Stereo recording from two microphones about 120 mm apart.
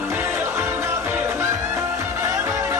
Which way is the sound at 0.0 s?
20° right (ahead or behind).